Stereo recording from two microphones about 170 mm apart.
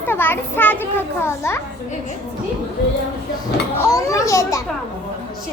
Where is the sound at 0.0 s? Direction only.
10° left (ahead or behind).